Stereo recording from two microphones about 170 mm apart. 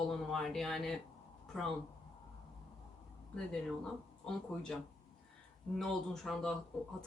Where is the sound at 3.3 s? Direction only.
5° left (ahead or behind).